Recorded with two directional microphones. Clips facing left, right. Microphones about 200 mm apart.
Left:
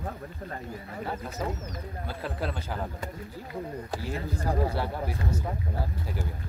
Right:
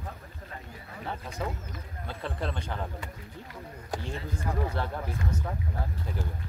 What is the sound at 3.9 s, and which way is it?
Speech, 5° left (ahead or behind).